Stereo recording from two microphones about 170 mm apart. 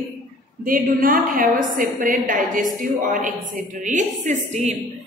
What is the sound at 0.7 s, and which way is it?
A woman's voice, 55° right (ahead or behind).